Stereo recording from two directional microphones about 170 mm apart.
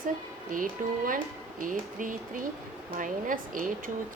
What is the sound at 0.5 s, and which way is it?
Speech, 50° right (ahead or behind).